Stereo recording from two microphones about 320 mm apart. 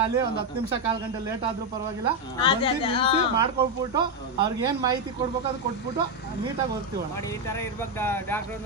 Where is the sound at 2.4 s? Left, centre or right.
Centre.